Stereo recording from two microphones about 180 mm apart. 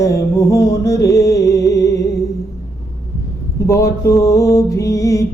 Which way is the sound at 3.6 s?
15° left (ahead or behind).